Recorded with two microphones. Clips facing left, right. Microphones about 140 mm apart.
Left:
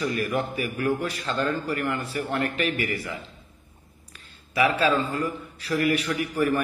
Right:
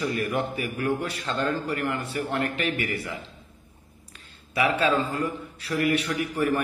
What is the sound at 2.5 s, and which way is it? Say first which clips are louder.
Speech: left 1 dB; 30° right (ahead or behind).